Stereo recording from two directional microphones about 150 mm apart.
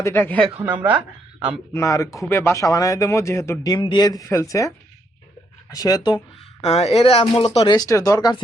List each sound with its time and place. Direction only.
0.0 s a woman's voice: 15° left (ahead or behind)
0.5 s speech: 10° right (ahead or behind)
1.7 s speech: 20° left (ahead or behind)
5.7 s speech: 25° left (ahead or behind)
6.6 s speech: 45° left (ahead or behind)
7.7 s speech: 25° left (ahead or behind)